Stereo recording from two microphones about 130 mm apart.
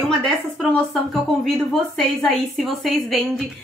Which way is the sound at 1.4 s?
5° left (ahead or behind).